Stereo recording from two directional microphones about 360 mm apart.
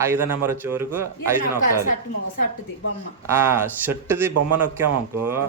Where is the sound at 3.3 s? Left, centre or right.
Centre.